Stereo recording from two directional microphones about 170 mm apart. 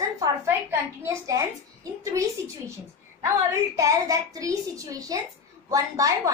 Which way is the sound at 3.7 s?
20° right (ahead or behind).